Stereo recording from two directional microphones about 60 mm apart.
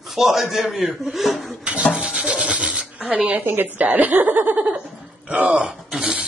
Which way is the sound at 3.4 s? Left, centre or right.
Right.